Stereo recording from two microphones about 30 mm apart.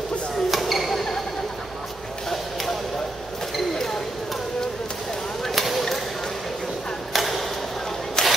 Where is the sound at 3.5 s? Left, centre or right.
Centre.